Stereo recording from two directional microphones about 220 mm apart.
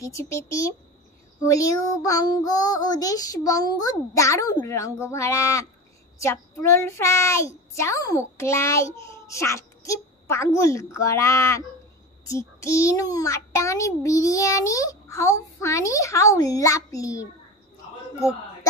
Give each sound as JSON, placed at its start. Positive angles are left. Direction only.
{"t": 0.0, "sound": "a child's voice", "side_deg": 15}